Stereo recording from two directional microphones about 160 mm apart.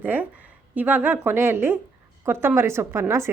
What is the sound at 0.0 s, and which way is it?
A woman's voice, 10° right (ahead or behind).